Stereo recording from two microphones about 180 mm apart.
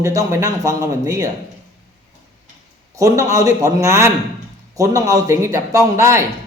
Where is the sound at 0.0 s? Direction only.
20° right (ahead or behind).